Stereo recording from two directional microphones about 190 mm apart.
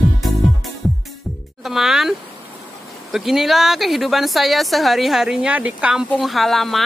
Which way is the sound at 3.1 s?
Centre (ahead or behind).